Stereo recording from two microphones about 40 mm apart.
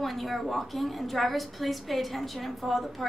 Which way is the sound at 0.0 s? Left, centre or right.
Centre.